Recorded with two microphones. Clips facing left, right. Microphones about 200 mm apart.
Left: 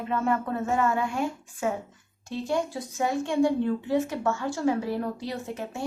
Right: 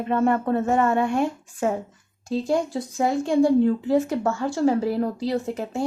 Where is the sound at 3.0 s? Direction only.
35° right (ahead or behind).